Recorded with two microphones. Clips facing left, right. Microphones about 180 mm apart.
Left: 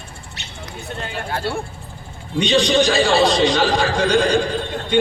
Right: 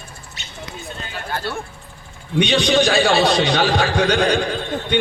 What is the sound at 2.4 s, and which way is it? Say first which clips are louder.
A man's voice: even; 65° right (ahead or behind).